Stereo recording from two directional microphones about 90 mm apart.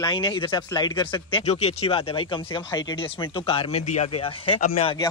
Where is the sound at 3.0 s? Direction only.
85° left.